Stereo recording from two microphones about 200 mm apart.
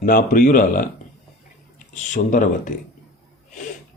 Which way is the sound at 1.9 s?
40° left (ahead or behind).